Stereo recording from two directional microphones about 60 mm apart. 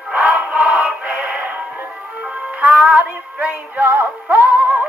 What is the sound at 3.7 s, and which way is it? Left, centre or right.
Music, right.